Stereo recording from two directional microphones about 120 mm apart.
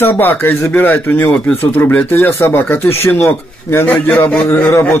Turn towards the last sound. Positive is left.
turn(degrees=20)  # may be behind; listen again after turning